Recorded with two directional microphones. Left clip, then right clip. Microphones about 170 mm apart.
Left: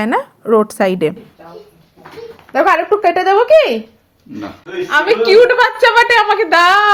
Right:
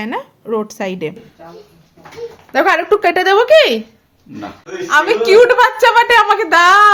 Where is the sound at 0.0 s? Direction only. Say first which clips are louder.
Left 7 dB; 25° left (ahead or behind).